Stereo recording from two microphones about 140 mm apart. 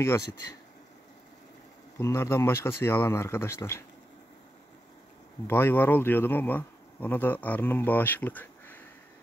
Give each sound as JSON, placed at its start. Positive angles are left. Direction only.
{"t": 2.0, "sound": "speech", "side_deg": 20}
{"t": 5.5, "sound": "speech", "side_deg": 15}